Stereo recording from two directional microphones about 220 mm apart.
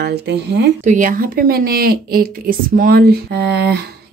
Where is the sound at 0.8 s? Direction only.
35° right (ahead or behind).